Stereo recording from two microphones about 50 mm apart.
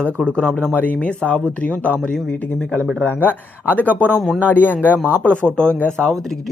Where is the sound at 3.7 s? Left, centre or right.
Left.